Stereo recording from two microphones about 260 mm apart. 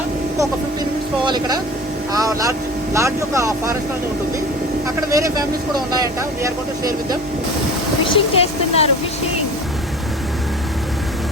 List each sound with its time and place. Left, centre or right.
1.2 s speech: centre
5.1 s speech: centre
8.0 s speech: left